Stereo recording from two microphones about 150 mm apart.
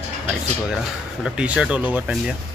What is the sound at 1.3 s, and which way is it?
Speech, 5° right (ahead or behind).